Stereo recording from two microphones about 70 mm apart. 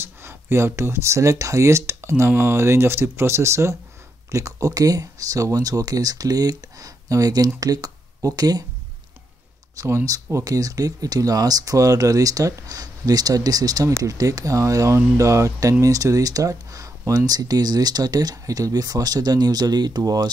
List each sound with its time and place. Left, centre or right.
0.0 s speech: right
9.8 s speech: right